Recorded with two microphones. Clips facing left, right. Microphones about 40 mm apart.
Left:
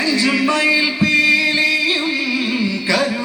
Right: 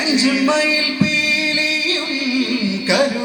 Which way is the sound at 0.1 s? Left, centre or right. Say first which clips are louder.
Right 2 dB; centre.